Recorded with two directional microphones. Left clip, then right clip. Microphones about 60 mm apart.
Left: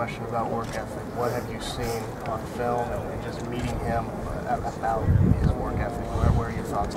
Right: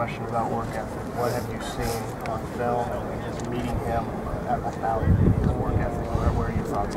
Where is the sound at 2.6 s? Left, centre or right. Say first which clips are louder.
Right 1 dB; centre.